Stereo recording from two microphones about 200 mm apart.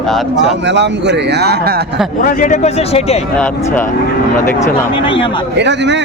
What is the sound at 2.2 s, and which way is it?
Speech, 40° left (ahead or behind).